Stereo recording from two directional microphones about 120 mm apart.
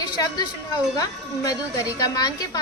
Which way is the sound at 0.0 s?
35° left (ahead or behind).